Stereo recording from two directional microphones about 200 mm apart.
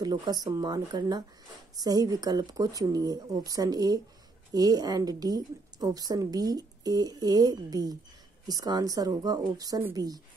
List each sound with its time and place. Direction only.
0.0 s a woman's voice: 20° right (ahead or behind)